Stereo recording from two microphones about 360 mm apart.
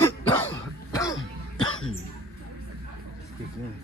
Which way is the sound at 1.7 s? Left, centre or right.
Left.